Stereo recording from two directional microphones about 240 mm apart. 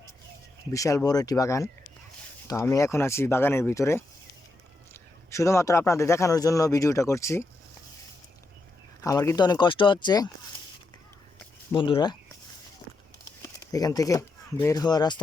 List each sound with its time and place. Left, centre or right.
0.7 s a man's voice: centre
9.0 s a man's voice: centre
11.7 s speech: centre
13.7 s speech: centre